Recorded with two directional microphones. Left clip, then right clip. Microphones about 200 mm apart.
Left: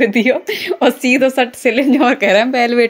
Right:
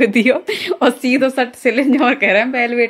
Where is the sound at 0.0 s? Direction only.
5° right (ahead or behind); by 2.9 s 25° left (ahead or behind).